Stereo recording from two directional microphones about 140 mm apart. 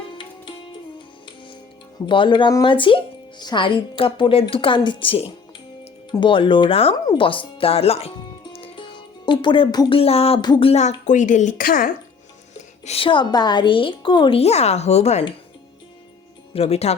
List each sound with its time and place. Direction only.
2.0 s speech: 35° left (ahead or behind)
8.5 s music: 40° left (ahead or behind)
10.0 s a sound: 45° left (ahead or behind)
10.4 s speech: 30° left (ahead or behind)
10.7 s speech: 55° left (ahead or behind); by 11.9 s 85° left
12.8 s speech: 45° left (ahead or behind)
16.5 s speech: 45° left (ahead or behind)